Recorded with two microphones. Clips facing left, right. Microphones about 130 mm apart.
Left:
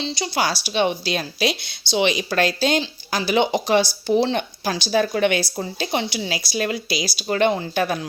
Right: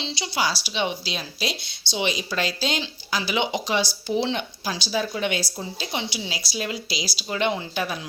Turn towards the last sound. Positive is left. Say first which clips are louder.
# left 5 dB
turn(degrees=50)  # may be behind; listen again after turning